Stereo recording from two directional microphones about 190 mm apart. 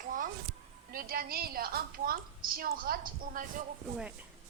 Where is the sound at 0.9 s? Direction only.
50° right (ahead or behind).